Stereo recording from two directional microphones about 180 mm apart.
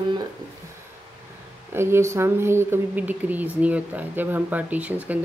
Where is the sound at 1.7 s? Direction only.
15° right (ahead or behind).